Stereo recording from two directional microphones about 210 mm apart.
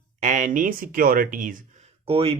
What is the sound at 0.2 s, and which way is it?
Speech, 35° right (ahead or behind).